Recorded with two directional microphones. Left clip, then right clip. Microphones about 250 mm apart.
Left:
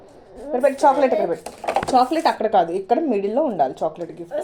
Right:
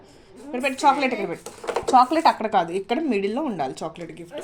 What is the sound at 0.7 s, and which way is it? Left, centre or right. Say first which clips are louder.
Speech: left 1 dB; right.